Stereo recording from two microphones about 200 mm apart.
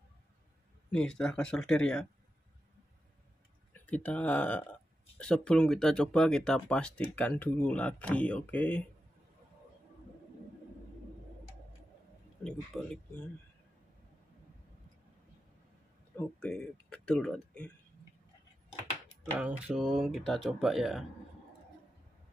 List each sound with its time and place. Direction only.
0.9 s speech: 5° left (ahead or behind)
3.7 s speech: 5° left (ahead or behind)
12.4 s speech: 5° left (ahead or behind)
16.3 s speech: 5° left (ahead or behind)
19.3 s speech: 5° right (ahead or behind)